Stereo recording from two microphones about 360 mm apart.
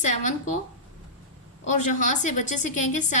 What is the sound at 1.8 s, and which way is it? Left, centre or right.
A woman's voice, left.